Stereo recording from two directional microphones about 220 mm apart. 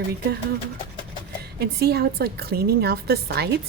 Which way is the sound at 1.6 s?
45° right (ahead or behind).